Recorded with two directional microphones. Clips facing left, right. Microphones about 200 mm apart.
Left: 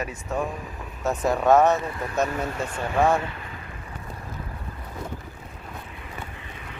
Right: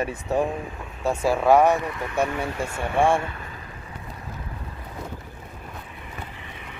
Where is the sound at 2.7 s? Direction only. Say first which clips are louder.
Right 1 dB; 30° right (ahead or behind).